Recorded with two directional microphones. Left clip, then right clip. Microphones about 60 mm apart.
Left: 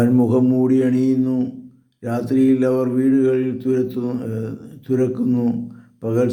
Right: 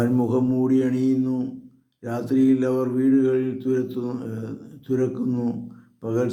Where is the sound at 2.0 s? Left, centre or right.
Left.